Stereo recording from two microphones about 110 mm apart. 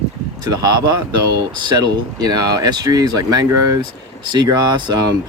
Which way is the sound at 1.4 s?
35° right (ahead or behind).